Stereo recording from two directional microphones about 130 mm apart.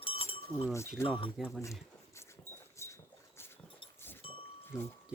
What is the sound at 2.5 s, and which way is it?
Dog, 20° right (ahead or behind).